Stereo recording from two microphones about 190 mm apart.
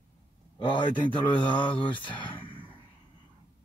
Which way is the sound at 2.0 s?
25° left (ahead or behind).